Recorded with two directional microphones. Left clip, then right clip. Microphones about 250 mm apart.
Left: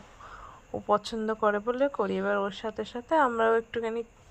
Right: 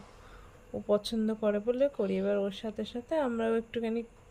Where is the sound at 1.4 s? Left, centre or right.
Left.